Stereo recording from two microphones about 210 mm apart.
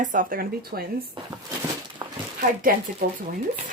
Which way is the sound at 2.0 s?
20° right (ahead or behind).